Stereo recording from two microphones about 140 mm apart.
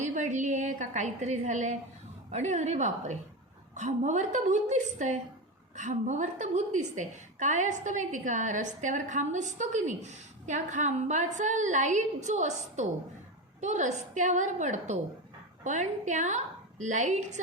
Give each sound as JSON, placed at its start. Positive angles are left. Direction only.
{"t": 0.0, "sound": "a woman's voice", "side_deg": -60}